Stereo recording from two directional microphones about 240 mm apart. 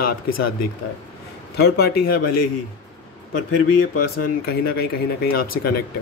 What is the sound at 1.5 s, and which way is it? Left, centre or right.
Speech, left.